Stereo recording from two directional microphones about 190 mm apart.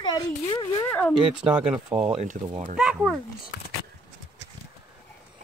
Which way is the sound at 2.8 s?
5° right (ahead or behind).